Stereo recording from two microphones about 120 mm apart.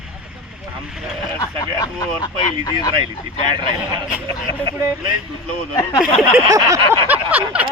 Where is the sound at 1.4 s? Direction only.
30° left (ahead or behind).